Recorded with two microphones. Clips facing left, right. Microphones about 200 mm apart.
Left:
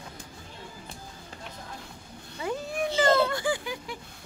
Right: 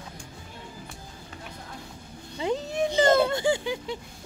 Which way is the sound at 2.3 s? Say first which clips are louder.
Right 4 dB; 20° right (ahead or behind).